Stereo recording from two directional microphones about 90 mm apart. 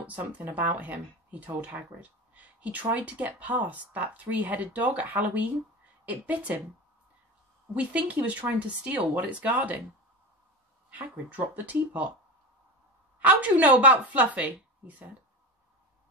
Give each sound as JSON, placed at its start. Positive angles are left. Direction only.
{"t": 0.0, "sound": "speech", "side_deg": -20}
{"t": 7.7, "sound": "speech", "side_deg": -15}
{"t": 10.9, "sound": "speech", "side_deg": -15}
{"t": 13.2, "sound": "speech", "side_deg": -15}